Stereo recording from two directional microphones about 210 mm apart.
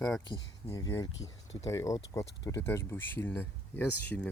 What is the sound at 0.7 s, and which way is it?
Speech, 15° left (ahead or behind).